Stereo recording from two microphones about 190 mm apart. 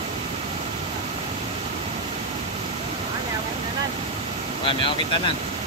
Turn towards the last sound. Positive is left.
turn(degrees=25)  # may be behind; listen again after turning